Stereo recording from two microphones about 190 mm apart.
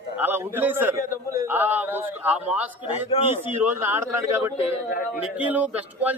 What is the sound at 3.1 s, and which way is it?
Speech, 30° left (ahead or behind).